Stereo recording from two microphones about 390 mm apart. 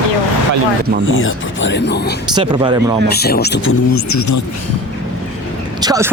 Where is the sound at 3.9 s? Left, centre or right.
Left.